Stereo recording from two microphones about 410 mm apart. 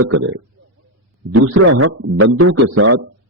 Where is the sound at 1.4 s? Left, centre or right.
Right.